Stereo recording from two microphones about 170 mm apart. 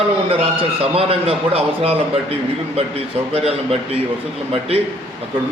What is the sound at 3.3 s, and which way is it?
Speech, 35° right (ahead or behind).